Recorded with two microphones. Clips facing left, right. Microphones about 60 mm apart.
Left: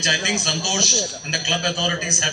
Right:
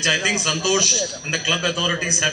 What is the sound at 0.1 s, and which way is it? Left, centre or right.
A man's voice, right.